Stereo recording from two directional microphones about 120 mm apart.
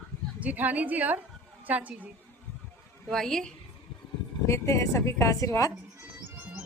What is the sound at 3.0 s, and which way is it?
Speech, 5° left (ahead or behind).